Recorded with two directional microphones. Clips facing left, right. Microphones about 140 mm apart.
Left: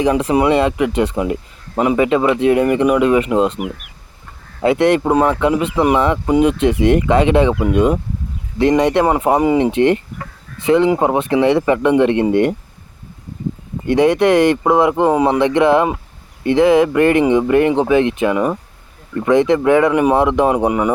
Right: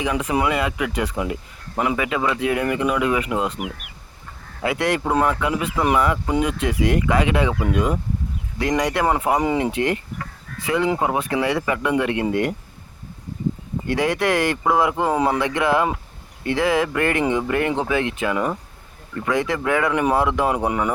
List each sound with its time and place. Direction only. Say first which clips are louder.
0.0 s speech: left 7 dB; 30° left (ahead or behind)
4.6 s speech: left 8 dB; 25° left (ahead or behind)
13.8 s speech: left 8 dB; 20° left (ahead or behind)